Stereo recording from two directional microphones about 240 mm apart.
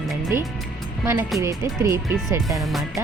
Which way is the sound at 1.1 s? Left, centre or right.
Centre.